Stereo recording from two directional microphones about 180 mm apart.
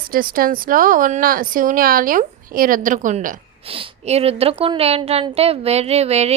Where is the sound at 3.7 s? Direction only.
30° right (ahead or behind).